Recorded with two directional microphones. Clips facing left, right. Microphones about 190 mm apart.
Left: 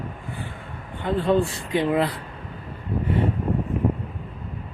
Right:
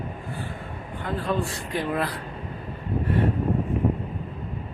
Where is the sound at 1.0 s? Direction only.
25° left (ahead or behind).